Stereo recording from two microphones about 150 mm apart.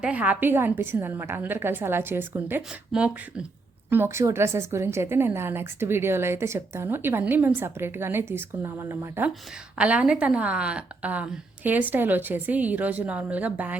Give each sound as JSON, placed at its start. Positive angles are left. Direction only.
{"t": 0.0, "sound": "a woman's voice", "side_deg": -10}